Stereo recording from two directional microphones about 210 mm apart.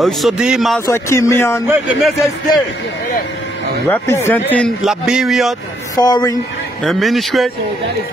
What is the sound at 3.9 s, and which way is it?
A man's voice, 10° left (ahead or behind).